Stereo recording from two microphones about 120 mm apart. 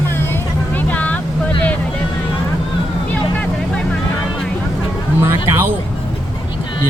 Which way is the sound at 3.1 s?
10° left (ahead or behind).